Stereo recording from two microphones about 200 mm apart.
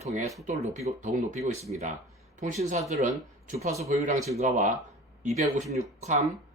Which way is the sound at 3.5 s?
15° right (ahead or behind).